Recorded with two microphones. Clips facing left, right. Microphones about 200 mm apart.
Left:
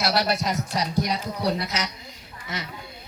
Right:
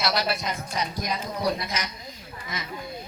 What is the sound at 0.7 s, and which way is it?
Speech, 75° left (ahead or behind).